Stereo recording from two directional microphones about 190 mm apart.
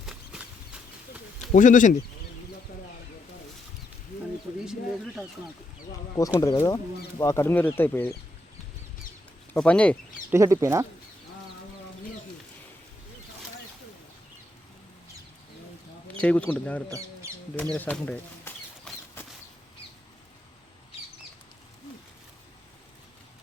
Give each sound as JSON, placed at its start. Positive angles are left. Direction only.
{"t": 0.0, "sound": "a sound", "side_deg": 0}
{"t": 1.5, "sound": "speech", "side_deg": 40}
{"t": 4.6, "sound": "speech", "side_deg": 0}
{"t": 6.4, "sound": "speech", "side_deg": 20}
{"t": 9.6, "sound": "speech", "side_deg": 5}
{"t": 10.3, "sound": "speech", "side_deg": -15}
{"t": 16.1, "sound": "speech", "side_deg": 5}
{"t": 17.6, "sound": "a sound", "side_deg": 10}